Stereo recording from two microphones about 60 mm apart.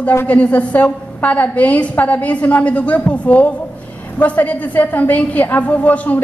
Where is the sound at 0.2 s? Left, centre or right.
Left.